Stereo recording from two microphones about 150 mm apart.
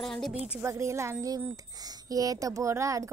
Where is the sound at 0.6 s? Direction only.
20° right (ahead or behind).